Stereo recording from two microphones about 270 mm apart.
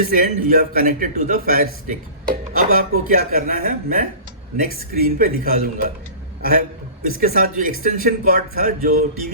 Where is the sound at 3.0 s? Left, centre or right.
Right.